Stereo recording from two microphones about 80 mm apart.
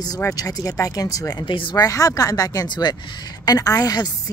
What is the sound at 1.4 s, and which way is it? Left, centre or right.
Speech, left.